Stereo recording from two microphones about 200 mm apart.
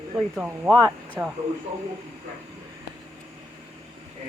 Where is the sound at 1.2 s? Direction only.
15° right (ahead or behind).